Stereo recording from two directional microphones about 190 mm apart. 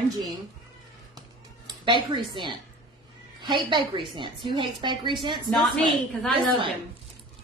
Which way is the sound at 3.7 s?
25° right (ahead or behind).